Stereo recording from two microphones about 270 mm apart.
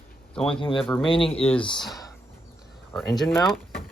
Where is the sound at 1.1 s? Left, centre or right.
Left.